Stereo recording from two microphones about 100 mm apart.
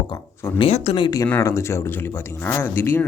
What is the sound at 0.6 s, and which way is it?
Speech, 75° left (ahead or behind).